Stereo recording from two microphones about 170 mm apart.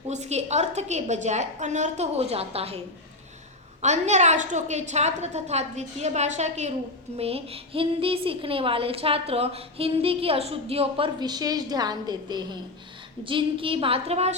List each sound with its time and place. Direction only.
0.1 s a woman's voice: 40° right (ahead or behind)